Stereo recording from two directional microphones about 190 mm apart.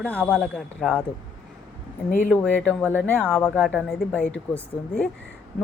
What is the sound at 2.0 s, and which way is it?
Speech, 45° left (ahead or behind).